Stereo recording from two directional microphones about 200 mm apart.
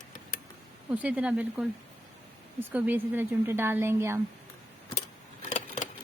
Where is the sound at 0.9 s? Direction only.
5° right (ahead or behind).